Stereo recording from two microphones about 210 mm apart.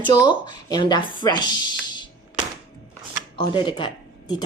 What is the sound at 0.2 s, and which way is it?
Speech, 20° left (ahead or behind).